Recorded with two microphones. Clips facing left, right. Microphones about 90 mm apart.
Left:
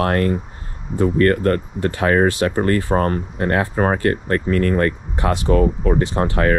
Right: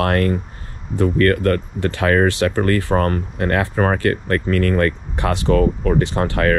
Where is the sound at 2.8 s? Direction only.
60° right (ahead or behind).